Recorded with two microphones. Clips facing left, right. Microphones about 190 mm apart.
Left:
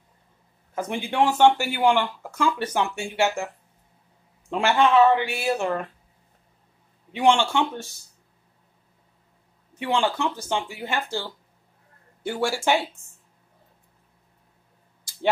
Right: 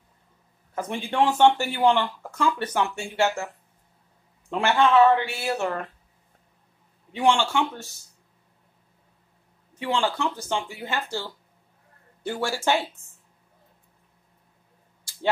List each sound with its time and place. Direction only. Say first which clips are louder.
0.7 s speech: left 1 dB; 10° left (ahead or behind)
4.5 s speech: left 1 dB; 15° left (ahead or behind)
7.1 s a man's voice: left 2 dB; 20° left (ahead or behind)
9.8 s speech: left 2 dB; 15° left (ahead or behind)
12.3 s speech: left 2 dB; 10° left (ahead or behind)